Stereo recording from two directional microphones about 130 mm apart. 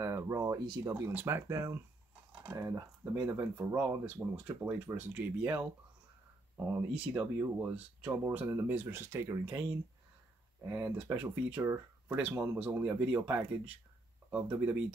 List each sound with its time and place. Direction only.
0.0 s speech: 20° right (ahead or behind)